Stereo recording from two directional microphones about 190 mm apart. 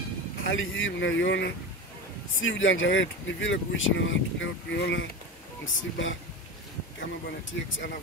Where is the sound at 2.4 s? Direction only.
85° left.